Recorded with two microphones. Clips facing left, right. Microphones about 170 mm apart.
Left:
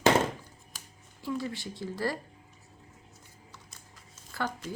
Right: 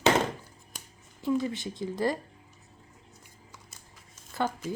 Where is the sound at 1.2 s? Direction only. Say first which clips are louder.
Right 6 dB; 20° right (ahead or behind).